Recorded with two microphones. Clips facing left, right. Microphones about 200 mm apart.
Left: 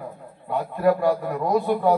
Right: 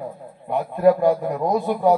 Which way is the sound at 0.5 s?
20° right (ahead or behind).